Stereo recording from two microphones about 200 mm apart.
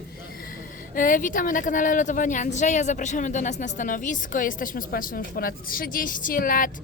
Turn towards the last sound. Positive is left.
turn(degrees=45)  # may be behind; listen again after turning